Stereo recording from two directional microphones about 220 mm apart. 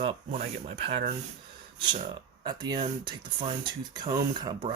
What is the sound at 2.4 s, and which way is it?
Speech, 20° right (ahead or behind).